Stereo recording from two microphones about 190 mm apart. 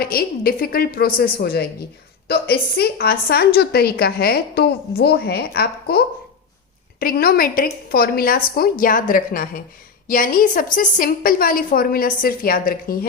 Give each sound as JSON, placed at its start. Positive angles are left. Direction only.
{"t": 0.0, "sound": "a woman's voice", "side_deg": 50}